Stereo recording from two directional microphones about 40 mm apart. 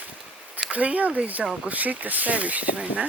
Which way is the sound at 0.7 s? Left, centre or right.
Right.